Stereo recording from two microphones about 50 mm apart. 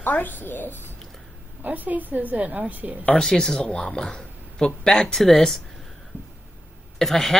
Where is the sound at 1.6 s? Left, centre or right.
Right.